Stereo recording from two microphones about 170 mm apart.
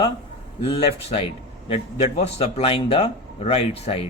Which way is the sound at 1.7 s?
35° left (ahead or behind).